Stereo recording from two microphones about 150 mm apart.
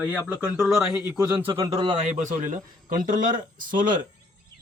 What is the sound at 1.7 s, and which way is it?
Speech, 35° right (ahead or behind).